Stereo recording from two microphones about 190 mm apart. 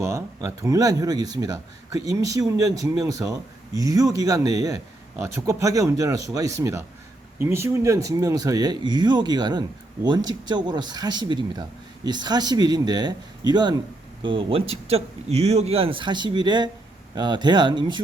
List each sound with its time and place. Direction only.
0.0 s a man's voice: 15° right (ahead or behind)